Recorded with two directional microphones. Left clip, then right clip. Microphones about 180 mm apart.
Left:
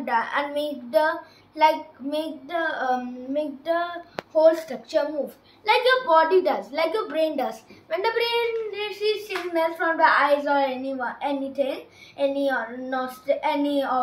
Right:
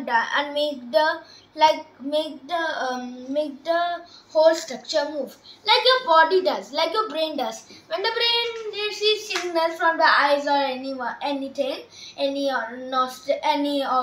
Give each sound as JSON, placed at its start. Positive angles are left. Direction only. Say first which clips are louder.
{"t": 0.0, "sound": "a child's voice", "louder": "right 2 dB", "side_deg": 10}